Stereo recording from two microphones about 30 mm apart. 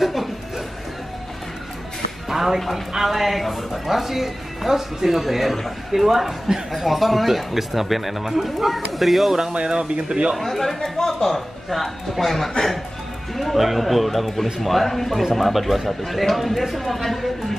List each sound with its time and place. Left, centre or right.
0.0 s music: centre
2.2 s music: centre
2.9 s speech: centre
9.5 s speech: right
10.4 s a man's voice: centre